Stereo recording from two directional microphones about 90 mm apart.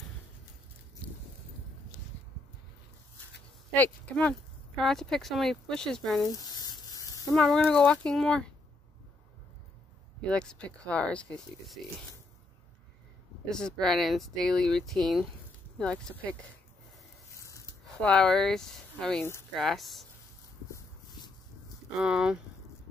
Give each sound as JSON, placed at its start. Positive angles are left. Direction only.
{"t": 3.7, "sound": "speech", "side_deg": 15}
{"t": 4.8, "sound": "speech", "side_deg": 5}
{"t": 6.2, "sound": "a sound", "side_deg": 45}
{"t": 7.3, "sound": "speech", "side_deg": 5}
{"t": 10.2, "sound": "speech", "side_deg": 10}
{"t": 13.5, "sound": "speech", "side_deg": 10}
{"t": 15.8, "sound": "speech", "side_deg": 15}
{"t": 17.4, "sound": "a sound", "side_deg": 35}
{"t": 18.0, "sound": "speech", "side_deg": 10}
{"t": 21.9, "sound": "speech", "side_deg": -10}